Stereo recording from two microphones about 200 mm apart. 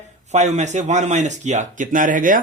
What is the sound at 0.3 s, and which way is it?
Speech, 35° right (ahead or behind).